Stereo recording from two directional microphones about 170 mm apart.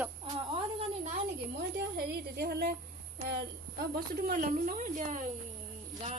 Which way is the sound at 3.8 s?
60° right (ahead or behind).